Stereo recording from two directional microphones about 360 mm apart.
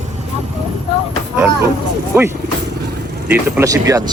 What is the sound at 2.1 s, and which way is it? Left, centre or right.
Speech, centre.